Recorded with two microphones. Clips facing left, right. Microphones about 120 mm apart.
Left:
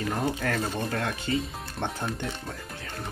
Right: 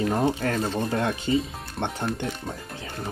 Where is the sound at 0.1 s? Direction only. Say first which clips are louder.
Right 4 dB; 25° right (ahead or behind).